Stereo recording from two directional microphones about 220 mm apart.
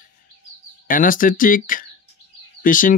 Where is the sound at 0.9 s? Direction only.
40° left (ahead or behind).